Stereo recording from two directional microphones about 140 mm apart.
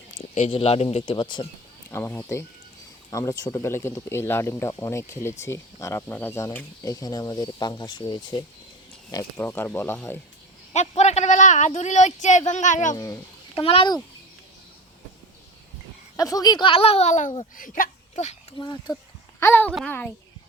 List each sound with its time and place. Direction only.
0.3 s speech: 50° left (ahead or behind)
1.9 s speech: 20° left (ahead or behind)
9.4 s speech: 15° left (ahead or behind)
10.7 s a man's voice: 50° left (ahead or behind)
13.6 s speech: 40° left (ahead or behind)
16.1 s speech: 25° left (ahead or behind); by 17.3 s 60° left (ahead or behind)
17.6 s speech: 70° left (ahead or behind)
18.6 s speech: 30° left (ahead or behind)
19.4 s speech: 15° left (ahead or behind)